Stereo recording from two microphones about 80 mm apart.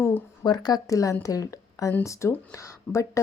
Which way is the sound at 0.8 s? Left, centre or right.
Left.